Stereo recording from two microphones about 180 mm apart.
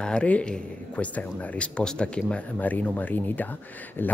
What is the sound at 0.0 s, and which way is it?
Speech, 5° left (ahead or behind).